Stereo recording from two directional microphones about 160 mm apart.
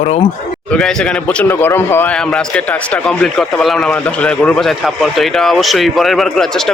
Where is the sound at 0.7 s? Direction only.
5° left (ahead or behind).